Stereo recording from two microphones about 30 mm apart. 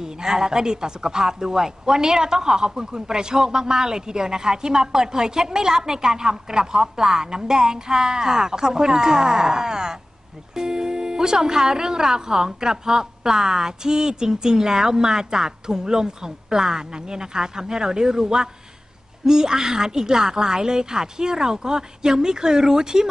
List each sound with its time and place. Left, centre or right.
0.0 s speech: right